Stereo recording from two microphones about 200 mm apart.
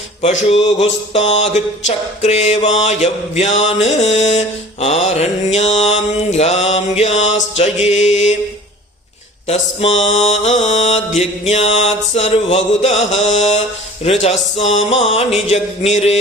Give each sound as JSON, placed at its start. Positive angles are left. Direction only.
{"t": 0.2, "sound": "mantra", "side_deg": 30}
{"t": 10.0, "sound": "mantra", "side_deg": 35}